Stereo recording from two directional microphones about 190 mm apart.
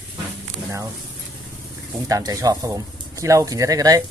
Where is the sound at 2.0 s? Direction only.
20° right (ahead or behind).